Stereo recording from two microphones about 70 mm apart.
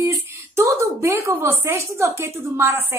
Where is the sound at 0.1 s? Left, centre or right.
Right.